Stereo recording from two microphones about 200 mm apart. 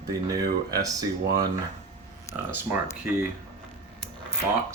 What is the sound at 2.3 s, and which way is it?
Speech, 15° left (ahead or behind).